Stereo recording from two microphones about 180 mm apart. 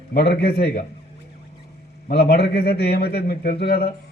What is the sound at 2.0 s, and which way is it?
A man's voice, 60° left (ahead or behind).